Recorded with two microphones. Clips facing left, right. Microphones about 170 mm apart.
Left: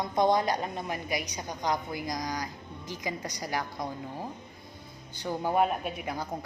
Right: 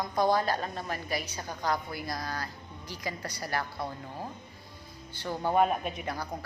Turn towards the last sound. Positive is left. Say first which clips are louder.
# even
turn(degrees=5)  # may be behind; listen again after turning